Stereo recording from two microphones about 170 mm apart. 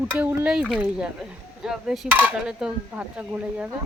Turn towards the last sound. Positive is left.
turn(degrees=-10)  # may be behind; listen again after turning